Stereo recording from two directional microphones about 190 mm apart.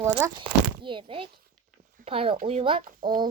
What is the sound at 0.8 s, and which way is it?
Speech, 25° right (ahead or behind).